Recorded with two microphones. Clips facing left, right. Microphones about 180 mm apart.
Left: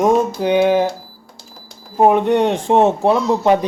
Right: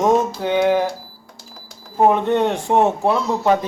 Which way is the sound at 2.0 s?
15° left (ahead or behind).